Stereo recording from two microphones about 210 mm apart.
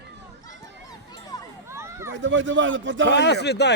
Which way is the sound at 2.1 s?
60° right (ahead or behind).